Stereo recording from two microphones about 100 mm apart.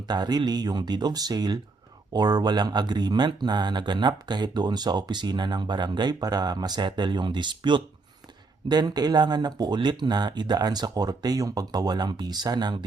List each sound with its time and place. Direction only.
0.1 s speech: 45° right (ahead or behind)